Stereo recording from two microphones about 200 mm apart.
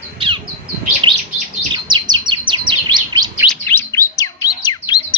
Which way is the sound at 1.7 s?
25° right (ahead or behind).